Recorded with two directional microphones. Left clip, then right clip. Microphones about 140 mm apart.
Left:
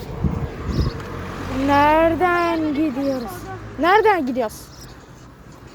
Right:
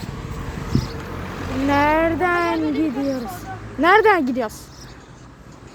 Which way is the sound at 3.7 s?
15° right (ahead or behind).